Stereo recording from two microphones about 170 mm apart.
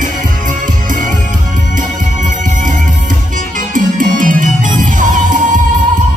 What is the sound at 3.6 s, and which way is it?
Music, 50° right (ahead or behind).